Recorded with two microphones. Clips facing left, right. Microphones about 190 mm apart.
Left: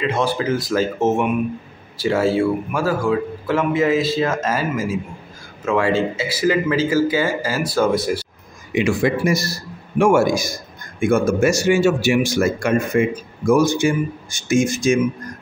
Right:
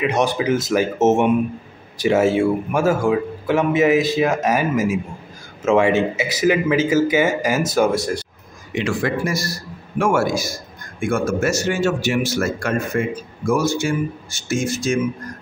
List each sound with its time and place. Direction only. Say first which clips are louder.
0.0 s speech: right 1 dB; 20° right (ahead or behind)
7.9 s speech: left 2 dB; 5° left (ahead or behind)
8.7 s a man's voice: left 3 dB; 15° left (ahead or behind)